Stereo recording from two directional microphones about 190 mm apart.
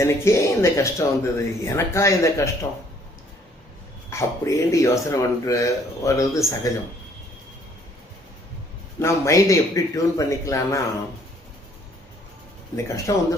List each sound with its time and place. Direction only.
0.0 s speech: 15° left (ahead or behind)
4.1 s speech: 15° left (ahead or behind)
9.0 s speech: 15° left (ahead or behind)
12.7 s speech: 20° left (ahead or behind)